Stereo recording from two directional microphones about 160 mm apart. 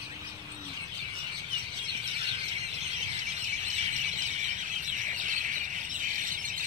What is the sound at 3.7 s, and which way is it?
Bird, 45° right (ahead or behind).